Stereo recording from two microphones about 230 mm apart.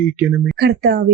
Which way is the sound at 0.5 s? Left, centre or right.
Right.